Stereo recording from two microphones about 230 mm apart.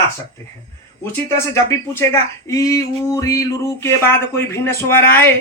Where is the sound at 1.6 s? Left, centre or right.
Centre.